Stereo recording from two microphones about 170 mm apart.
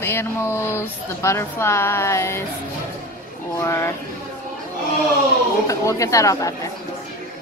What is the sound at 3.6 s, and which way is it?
Speech, 15° left (ahead or behind).